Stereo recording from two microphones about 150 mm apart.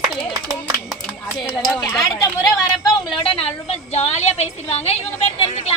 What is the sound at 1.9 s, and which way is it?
Speech, 25° left (ahead or behind).